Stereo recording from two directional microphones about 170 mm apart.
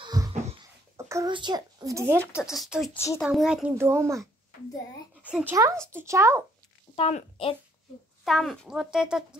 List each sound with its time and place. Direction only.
0.0 s wheeze: 20° right (ahead or behind)
0.9 s a sound: 15° right (ahead or behind)
1.3 s speech: 25° right (ahead or behind)
2.5 s speech: centre (ahead or behind)
3.7 s speech: 15° right (ahead or behind)
7.0 s speech: 35° left (ahead or behind)
8.3 s speech: centre (ahead or behind)